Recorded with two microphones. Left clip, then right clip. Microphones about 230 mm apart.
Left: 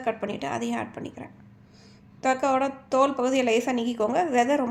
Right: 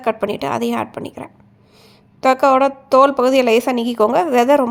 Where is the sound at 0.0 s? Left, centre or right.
Right.